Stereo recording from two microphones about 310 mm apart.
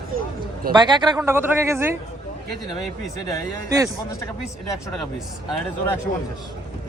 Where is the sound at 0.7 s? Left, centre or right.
Centre.